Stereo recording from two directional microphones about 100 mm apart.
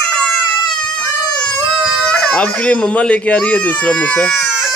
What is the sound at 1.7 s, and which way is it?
Speech, 5° left (ahead or behind).